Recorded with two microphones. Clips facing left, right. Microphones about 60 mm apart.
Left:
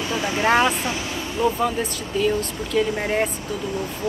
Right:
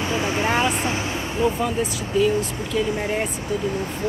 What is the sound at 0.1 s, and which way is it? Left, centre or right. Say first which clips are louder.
Vehicle: left 1 dB; right.